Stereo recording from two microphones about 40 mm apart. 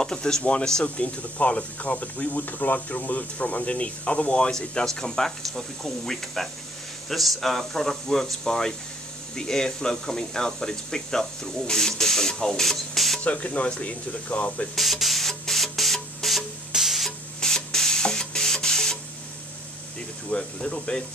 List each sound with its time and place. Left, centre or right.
0.0 s speech: centre; by 2.4 s left
2.4 s speech: left
4.5 s speech: centre
13.2 s speech: left
14.8 s spray: centre
16.7 s stir: centre
17.4 s spray: centre
20.2 s speech: left